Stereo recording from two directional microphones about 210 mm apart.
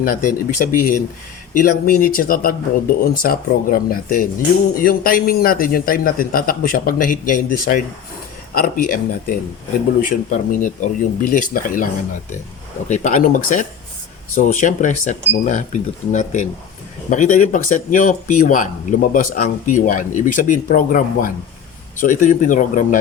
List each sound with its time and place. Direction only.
0.0 s speech: 40° left (ahead or behind)
12.9 s speech: 35° left (ahead or behind)